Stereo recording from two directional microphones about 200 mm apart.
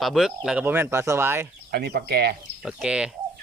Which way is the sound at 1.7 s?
50° right (ahead or behind).